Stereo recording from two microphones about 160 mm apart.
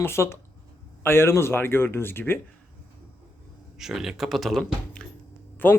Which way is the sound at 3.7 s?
5° right (ahead or behind).